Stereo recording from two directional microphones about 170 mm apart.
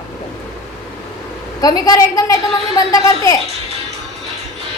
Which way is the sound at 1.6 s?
20° left (ahead or behind).